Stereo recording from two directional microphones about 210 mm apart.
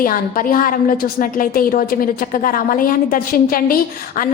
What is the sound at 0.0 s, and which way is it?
A woman's voice, 40° left (ahead or behind).